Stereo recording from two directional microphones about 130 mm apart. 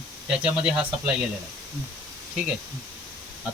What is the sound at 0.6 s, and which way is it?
Speech, 5° right (ahead or behind).